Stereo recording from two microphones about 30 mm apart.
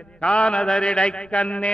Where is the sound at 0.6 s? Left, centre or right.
Left.